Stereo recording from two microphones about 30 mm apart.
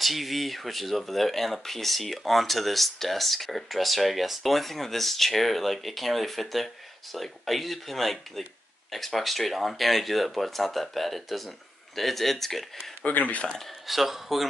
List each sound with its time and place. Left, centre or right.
0.0 s speech: centre
13.0 s speech: left
13.8 s speech: centre